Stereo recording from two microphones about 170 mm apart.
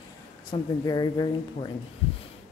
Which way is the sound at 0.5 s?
25° left (ahead or behind).